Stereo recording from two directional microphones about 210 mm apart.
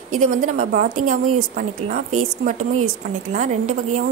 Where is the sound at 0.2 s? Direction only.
40° right (ahead or behind).